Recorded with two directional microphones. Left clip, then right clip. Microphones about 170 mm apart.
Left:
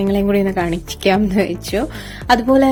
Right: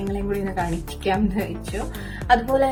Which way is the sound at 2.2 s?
40° left (ahead or behind).